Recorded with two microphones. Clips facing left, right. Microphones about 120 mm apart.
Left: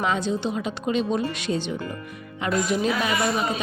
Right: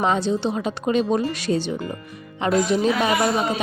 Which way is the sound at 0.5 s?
45° right (ahead or behind).